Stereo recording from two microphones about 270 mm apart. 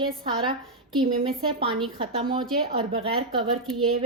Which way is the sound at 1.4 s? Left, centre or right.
Centre.